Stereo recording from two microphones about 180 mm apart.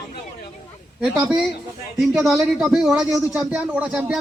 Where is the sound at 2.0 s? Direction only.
Centre (ahead or behind).